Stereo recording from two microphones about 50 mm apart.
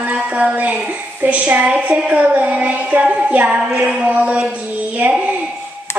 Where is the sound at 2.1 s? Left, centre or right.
Right.